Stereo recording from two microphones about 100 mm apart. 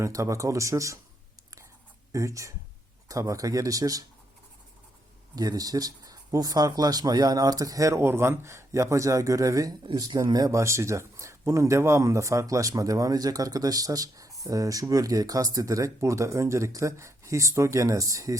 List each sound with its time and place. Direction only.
0.0 s speech: 30° right (ahead or behind)
2.1 s speech: 30° right (ahead or behind)
5.3 s speech: 40° right (ahead or behind)